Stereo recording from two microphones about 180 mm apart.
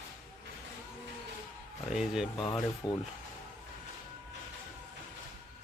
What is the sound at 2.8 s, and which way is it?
Speech, 25° left (ahead or behind).